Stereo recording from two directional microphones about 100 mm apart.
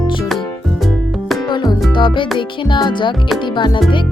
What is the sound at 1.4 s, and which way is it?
Music, 45° left (ahead or behind).